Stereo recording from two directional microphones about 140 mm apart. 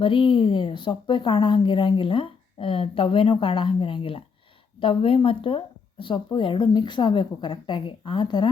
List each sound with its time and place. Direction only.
0.0 s a woman's voice: 35° left (ahead or behind)